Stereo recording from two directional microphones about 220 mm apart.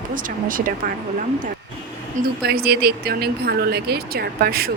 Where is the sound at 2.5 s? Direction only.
45° right (ahead or behind).